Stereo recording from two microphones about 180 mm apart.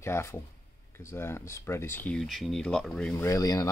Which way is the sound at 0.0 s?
15° left (ahead or behind).